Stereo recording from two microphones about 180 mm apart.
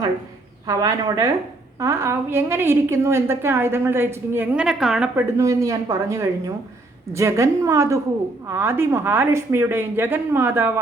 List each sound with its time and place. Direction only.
0.7 s a woman's voice: 20° right (ahead or behind)